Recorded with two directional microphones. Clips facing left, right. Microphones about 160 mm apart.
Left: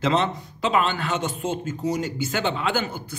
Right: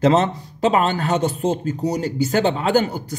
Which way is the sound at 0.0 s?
40° right (ahead or behind).